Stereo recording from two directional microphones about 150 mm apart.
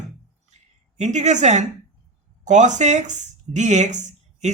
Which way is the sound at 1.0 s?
50° right (ahead or behind).